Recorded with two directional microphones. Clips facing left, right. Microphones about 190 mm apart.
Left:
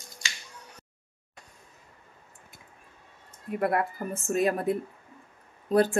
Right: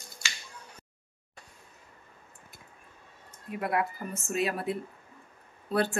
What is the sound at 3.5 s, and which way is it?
A woman's voice, 50° left (ahead or behind).